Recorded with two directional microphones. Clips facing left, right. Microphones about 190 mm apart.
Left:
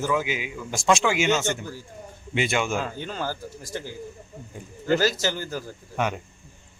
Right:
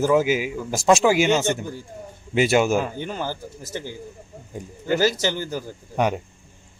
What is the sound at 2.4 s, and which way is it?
Speech, 40° right (ahead or behind).